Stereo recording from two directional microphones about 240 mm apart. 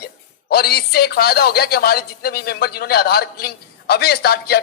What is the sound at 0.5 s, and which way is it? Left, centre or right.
Speech, left.